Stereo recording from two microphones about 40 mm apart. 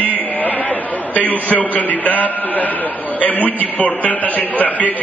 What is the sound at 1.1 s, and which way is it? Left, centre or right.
Speech, left.